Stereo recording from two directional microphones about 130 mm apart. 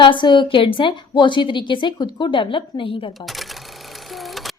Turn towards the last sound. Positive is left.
turn(degrees=0)  # may be behind; listen again after turning